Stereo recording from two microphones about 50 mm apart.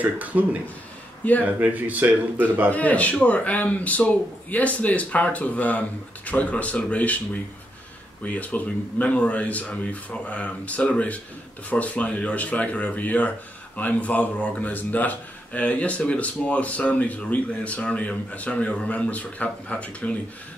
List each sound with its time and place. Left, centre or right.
0.0 s speech: right
2.7 s speech: left
8.2 s speech: left